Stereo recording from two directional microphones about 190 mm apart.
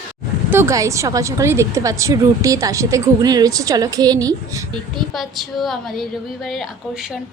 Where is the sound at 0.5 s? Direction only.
15° right (ahead or behind).